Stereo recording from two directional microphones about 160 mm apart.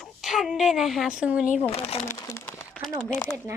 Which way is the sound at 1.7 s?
40° left (ahead or behind).